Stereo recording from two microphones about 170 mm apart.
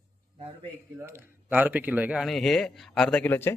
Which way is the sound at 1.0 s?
15° right (ahead or behind).